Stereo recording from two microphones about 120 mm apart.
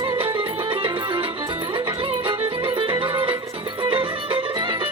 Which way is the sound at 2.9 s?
45° right (ahead or behind).